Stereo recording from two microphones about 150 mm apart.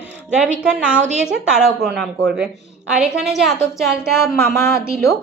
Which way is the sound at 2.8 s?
5° right (ahead or behind).